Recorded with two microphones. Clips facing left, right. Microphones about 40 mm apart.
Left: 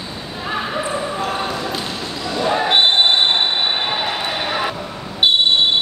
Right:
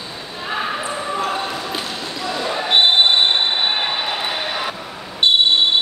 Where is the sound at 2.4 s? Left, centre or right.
Left.